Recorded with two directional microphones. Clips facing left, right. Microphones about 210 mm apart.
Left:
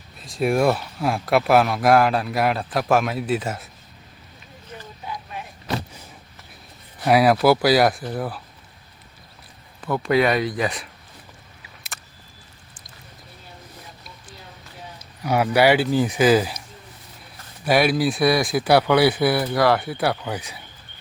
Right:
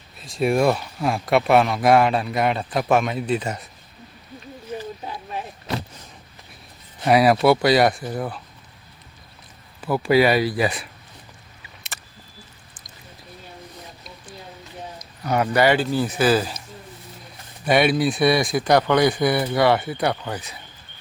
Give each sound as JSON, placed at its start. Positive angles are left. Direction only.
{"t": 0.2, "sound": "speech", "side_deg": 0}
{"t": 5.0, "sound": "a sound", "side_deg": -35}
{"t": 7.0, "sound": "speech", "side_deg": 0}
{"t": 9.8, "sound": "speech", "side_deg": -5}
{"t": 11.6, "sound": "a sound", "side_deg": 0}
{"t": 15.2, "sound": "speech", "side_deg": 10}
{"t": 17.7, "sound": "speech", "side_deg": 0}